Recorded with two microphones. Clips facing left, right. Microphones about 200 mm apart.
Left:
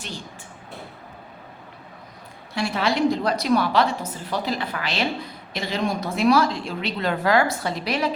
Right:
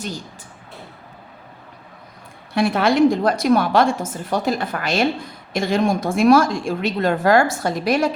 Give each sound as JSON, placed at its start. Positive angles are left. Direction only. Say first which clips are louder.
{"t": 2.6, "sound": "a woman's voice", "louder": "right 7 dB", "side_deg": -55}